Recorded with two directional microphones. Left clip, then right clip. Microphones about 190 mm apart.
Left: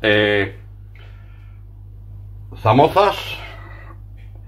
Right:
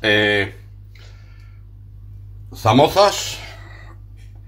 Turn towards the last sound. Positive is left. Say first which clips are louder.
# left 1 dB
turn(degrees=0)  # may be behind; listen again after turning